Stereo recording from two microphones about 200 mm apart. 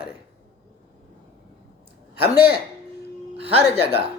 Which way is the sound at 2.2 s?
50° left (ahead or behind).